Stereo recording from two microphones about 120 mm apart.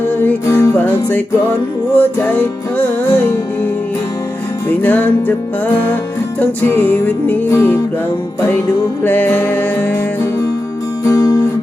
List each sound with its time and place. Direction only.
0.2 s music: 20° left (ahead or behind)
4.8 s music: 15° left (ahead or behind)
6.4 s music: 15° left (ahead or behind)
9.0 s music: 15° left (ahead or behind)
11.0 s music: 25° left (ahead or behind)